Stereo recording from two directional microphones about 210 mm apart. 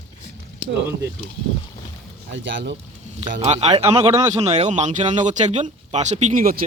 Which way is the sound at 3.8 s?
15° right (ahead or behind).